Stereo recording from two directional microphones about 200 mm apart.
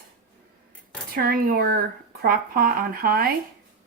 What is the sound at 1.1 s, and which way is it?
Speech, 45° right (ahead or behind).